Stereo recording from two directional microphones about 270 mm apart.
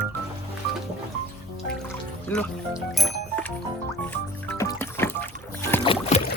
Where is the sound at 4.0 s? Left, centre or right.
Centre; by 6.2 s left.